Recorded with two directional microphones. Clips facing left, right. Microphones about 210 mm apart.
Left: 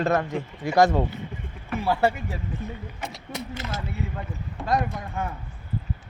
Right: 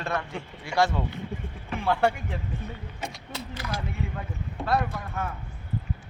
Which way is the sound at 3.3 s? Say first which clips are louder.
Left 2 dB; 20° left (ahead or behind).